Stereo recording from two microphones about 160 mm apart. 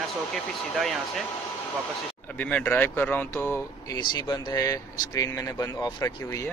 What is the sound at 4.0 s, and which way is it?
Speech, 25° left (ahead or behind).